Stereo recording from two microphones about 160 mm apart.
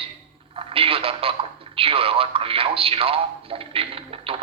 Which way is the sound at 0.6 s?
35° right (ahead or behind).